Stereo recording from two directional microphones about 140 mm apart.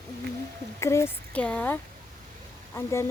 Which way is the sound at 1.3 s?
10° left (ahead or behind).